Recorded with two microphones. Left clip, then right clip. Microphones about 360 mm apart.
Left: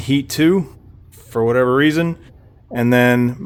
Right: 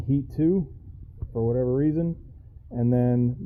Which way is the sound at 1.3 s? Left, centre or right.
Left.